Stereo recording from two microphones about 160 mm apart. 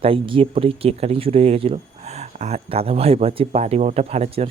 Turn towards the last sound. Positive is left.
turn(degrees=-40)  # may be behind; listen again after turning